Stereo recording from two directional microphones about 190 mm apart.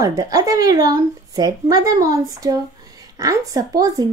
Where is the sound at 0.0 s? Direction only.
15° right (ahead or behind).